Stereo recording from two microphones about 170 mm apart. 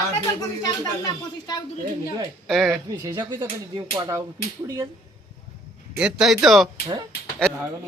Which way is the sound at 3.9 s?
20° right (ahead or behind).